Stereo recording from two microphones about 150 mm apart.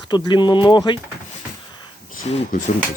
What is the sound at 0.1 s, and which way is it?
Speech, 30° left (ahead or behind).